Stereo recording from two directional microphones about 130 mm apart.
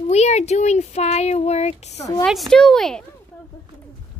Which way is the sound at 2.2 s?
Centre (ahead or behind).